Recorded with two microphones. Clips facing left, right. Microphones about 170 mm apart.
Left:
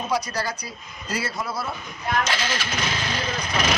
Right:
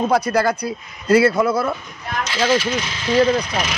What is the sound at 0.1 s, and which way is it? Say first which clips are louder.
Speech: right 9 dB; 55° right (ahead or behind).